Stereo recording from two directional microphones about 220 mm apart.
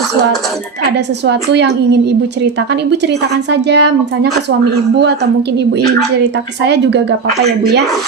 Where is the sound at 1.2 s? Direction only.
50° right (ahead or behind).